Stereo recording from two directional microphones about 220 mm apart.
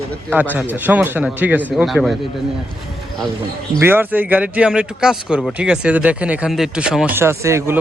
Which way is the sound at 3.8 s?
10° right (ahead or behind).